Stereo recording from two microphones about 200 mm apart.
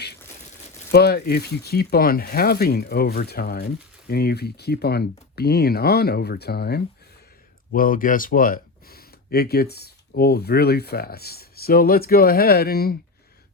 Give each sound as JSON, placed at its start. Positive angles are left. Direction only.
{"t": 0.9, "sound": "speech", "side_deg": 55}